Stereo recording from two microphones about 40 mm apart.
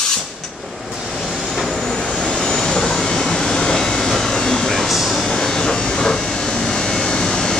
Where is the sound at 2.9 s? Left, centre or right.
Centre.